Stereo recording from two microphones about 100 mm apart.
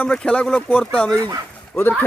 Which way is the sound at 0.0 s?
10° left (ahead or behind).